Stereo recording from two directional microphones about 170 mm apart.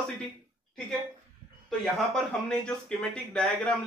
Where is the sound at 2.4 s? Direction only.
5° left (ahead or behind).